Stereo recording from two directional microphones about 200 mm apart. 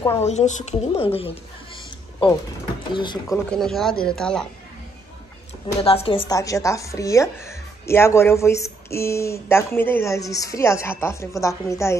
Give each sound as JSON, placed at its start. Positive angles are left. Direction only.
{"t": 0.2, "sound": "a woman's voice", "side_deg": 35}
{"t": 2.9, "sound": "speech", "side_deg": 20}
{"t": 3.4, "sound": "speech", "side_deg": 5}
{"t": 5.8, "sound": "a woman's voice", "side_deg": 30}